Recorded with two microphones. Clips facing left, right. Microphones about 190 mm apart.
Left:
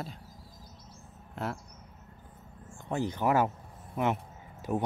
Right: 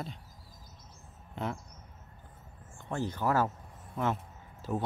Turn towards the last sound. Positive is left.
turn(degrees=15)  # may be behind; listen again after turning